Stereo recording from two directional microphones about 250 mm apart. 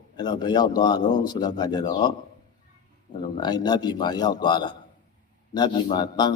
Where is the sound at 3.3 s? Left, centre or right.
Centre.